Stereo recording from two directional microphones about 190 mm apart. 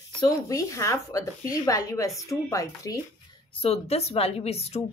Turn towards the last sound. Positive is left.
turn(degrees=35)  # may be behind; listen again after turning